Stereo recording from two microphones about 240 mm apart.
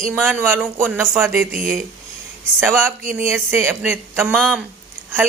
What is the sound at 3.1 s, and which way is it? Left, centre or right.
A man's voice, centre.